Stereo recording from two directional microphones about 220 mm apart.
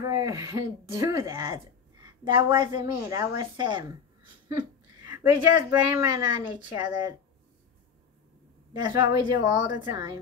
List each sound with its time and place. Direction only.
0.0 s speech: 15° right (ahead or behind)
5.0 s a woman's voice: 15° right (ahead or behind)
8.8 s a woman's voice: 20° right (ahead or behind)